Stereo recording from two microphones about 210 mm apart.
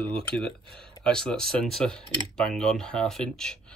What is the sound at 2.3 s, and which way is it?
Speech, 5° left (ahead or behind).